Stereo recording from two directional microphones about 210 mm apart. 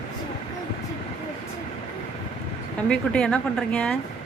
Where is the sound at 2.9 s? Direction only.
5° left (ahead or behind).